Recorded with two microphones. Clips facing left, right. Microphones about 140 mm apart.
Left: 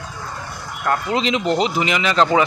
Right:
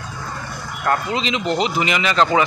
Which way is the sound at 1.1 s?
50° left (ahead or behind).